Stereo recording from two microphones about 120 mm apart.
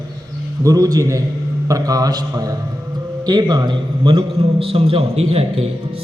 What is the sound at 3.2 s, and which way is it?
A man's voice, 35° right (ahead or behind).